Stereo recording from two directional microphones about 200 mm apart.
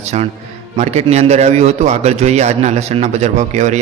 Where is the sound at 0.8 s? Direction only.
35° right (ahead or behind).